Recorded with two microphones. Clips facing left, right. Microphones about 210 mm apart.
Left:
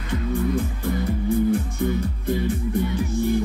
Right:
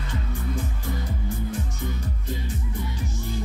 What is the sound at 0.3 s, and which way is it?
Music, 60° left (ahead or behind).